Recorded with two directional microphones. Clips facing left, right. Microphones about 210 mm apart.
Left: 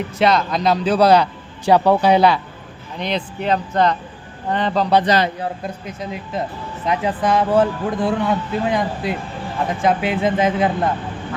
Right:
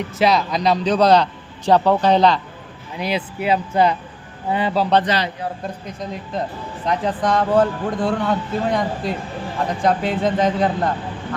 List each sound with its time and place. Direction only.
0.2 s a man's voice: centre (ahead or behind)
3.0 s speech: 5° right (ahead or behind)
5.0 s a man's voice: 45° left (ahead or behind)
5.6 s a man's voice: 5° left (ahead or behind)